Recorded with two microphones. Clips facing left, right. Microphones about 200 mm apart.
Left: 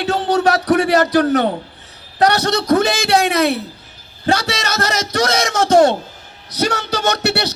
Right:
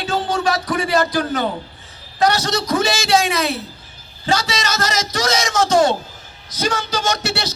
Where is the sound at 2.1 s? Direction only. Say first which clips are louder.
Left 3 dB; 65° left (ahead or behind).